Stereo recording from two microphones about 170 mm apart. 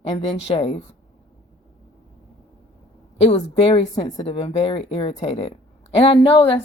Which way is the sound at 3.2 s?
40° left (ahead or behind).